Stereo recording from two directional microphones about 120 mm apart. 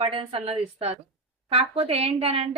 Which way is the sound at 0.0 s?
50° right (ahead or behind).